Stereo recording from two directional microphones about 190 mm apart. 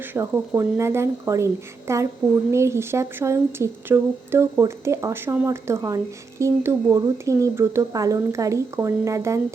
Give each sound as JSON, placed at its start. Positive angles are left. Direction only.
{"t": 0.1, "sound": "speech", "side_deg": -10}